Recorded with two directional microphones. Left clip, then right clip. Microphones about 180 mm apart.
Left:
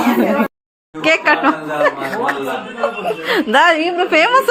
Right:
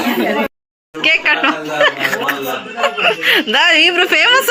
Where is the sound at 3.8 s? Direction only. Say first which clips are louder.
Right 6 dB; 10° right (ahead or behind).